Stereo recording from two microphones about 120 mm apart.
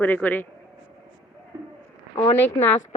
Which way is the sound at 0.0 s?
15° left (ahead or behind).